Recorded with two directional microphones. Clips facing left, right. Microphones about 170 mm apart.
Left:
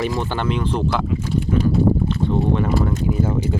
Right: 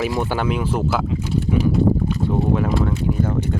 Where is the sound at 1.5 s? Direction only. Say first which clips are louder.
Even; 10° right (ahead or behind).